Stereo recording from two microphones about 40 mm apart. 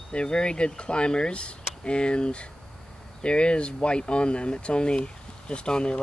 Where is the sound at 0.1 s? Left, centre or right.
Left.